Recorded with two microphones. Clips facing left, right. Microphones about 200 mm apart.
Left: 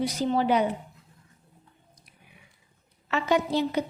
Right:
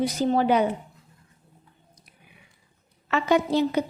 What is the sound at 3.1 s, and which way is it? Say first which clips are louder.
Speech: right 3 dB; 50° right (ahead or behind).